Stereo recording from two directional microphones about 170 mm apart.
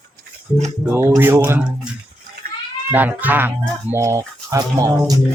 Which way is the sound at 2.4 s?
60° right (ahead or behind).